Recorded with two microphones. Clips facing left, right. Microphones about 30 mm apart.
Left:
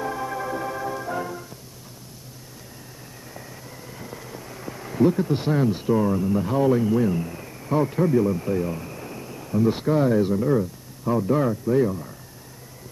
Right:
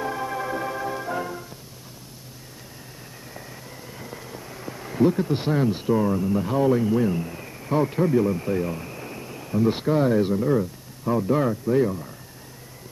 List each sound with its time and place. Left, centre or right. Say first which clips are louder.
0.0 s music: even; centre
3.3 s a sound: even; centre
5.9 s speech: left 1 dB; centre
7.4 s a sound: even; centre
9.8 s speech: even; centre
10.3 s speech: even; centre